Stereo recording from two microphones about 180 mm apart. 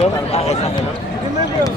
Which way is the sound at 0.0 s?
35° left (ahead or behind).